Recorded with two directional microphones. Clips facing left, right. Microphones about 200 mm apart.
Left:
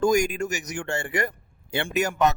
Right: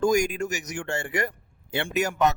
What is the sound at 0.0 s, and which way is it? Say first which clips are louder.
Speech: left 1 dB; 50° left (ahead or behind).